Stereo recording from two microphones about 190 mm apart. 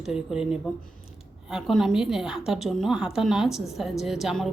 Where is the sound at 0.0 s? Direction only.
Centre (ahead or behind).